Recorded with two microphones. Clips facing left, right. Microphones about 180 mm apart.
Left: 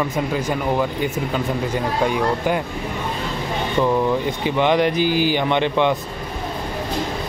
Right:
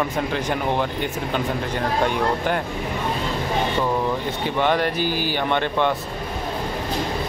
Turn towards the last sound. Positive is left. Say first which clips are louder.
# left 3 dB
turn(degrees=15)  # may be behind; listen again after turning